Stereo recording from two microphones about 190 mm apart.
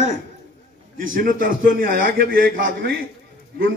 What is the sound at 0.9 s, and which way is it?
A man's voice, 45° right (ahead or behind).